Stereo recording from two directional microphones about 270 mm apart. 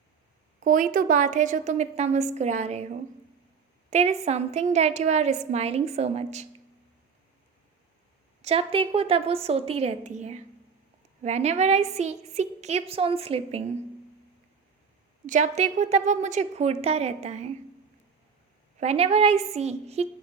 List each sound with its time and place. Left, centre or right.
0.6 s a woman's voice: right
3.8 s a woman's voice: right
8.4 s a woman's voice: right
15.3 s a woman's voice: right
18.8 s a woman's voice: right